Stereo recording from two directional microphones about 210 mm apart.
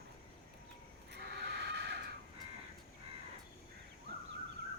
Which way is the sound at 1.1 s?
55° right (ahead or behind).